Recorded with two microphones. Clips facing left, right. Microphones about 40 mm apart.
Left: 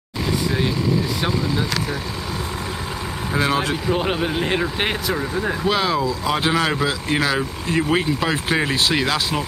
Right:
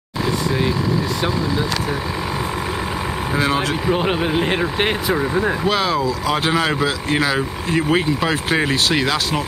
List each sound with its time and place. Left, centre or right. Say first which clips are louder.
3.3 s speech: even; centre